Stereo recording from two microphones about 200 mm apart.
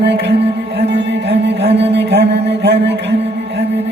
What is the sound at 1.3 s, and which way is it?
Music, 30° right (ahead or behind).